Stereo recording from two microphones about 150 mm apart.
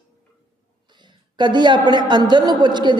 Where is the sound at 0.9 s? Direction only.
30° right (ahead or behind).